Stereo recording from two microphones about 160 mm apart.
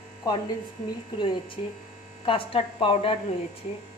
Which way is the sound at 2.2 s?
35° left (ahead or behind).